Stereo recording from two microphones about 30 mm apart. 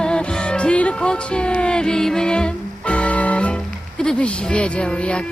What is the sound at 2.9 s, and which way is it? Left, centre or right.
Music, left.